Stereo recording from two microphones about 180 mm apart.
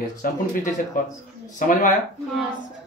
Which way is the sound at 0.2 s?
55° left (ahead or behind).